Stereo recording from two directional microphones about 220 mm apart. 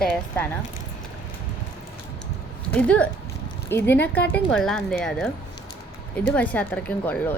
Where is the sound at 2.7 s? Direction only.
5° left (ahead or behind).